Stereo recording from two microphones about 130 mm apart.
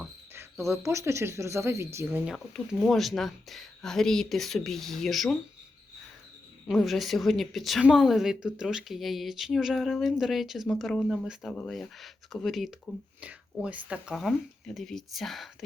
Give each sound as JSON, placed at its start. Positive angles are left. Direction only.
{"t": 0.3, "sound": "speech", "side_deg": -20}
{"t": 2.2, "sound": "a woman's voice", "side_deg": 0}
{"t": 6.7, "sound": "a woman's voice", "side_deg": 0}